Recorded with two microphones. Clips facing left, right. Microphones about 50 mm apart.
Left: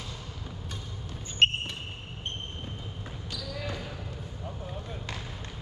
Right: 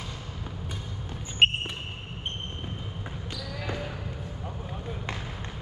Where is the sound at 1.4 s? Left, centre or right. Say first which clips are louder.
Right 2 dB; centre.